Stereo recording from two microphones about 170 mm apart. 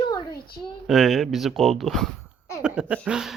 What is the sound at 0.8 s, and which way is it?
Speech, centre (ahead or behind).